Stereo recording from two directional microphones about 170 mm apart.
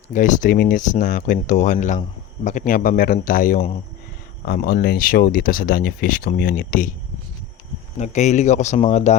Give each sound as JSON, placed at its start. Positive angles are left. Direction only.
{"t": 0.1, "sound": "speech", "side_deg": 50}
{"t": 7.9, "sound": "speech", "side_deg": 40}